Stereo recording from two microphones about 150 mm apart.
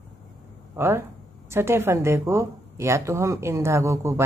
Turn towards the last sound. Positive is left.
turn(degrees=-20)  # may be behind; listen again after turning